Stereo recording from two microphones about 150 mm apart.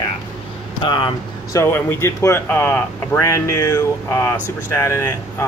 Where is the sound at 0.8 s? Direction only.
35° left (ahead or behind).